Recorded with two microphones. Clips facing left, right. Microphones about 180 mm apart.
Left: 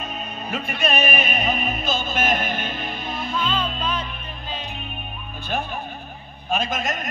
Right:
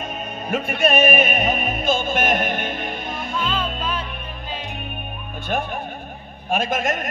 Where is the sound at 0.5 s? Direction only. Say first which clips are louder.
Right 5 dB; 50° right (ahead or behind).